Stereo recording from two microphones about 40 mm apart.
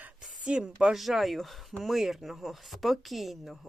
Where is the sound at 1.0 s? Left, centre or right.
Centre.